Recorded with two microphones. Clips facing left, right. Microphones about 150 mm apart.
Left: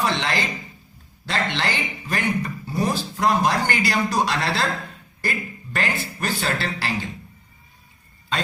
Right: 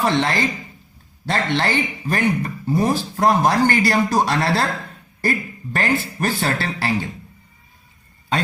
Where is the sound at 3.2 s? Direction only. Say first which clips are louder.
Right 4 dB; 50° right (ahead or behind).